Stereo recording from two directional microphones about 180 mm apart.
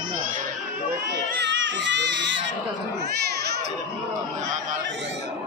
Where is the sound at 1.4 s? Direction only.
90° right.